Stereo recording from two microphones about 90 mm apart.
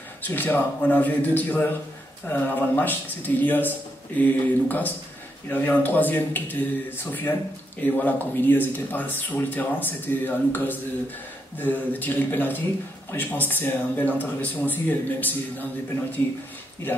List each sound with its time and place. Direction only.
0.3 s speech: 20° left (ahead or behind)